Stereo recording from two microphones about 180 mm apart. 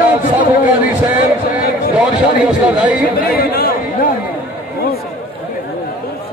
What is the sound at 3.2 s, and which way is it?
Chatter, 60° left (ahead or behind).